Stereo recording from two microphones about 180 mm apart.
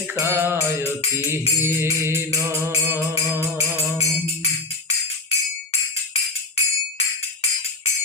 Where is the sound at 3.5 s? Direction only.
35° left (ahead or behind).